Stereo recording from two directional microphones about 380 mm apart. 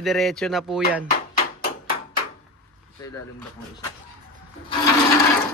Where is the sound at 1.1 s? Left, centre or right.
Left.